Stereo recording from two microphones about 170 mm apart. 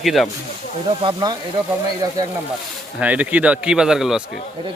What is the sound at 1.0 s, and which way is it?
Speech, 25° right (ahead or behind).